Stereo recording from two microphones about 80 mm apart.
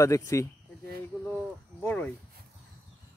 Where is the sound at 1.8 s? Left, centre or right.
Centre.